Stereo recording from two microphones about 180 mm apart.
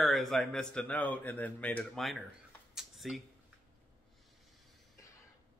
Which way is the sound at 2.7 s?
Centre (ahead or behind).